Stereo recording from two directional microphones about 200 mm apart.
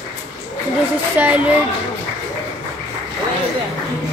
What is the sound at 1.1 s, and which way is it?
Speech, 5° right (ahead or behind).